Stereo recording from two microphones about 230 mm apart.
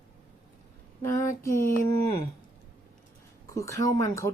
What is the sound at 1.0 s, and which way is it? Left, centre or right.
Speech, centre.